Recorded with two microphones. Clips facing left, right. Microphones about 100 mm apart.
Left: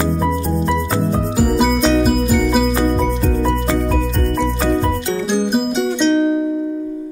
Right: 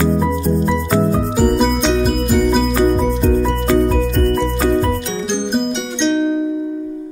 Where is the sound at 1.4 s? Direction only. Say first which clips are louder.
Even; 5° left (ahead or behind).